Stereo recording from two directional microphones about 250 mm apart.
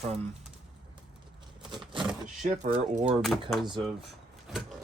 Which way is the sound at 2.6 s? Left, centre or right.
Right.